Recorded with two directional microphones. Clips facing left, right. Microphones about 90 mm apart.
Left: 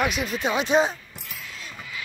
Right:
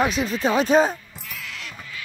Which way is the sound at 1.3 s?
90° right.